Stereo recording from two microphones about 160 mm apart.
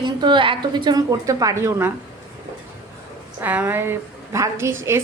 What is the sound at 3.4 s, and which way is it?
Speech, 10° right (ahead or behind).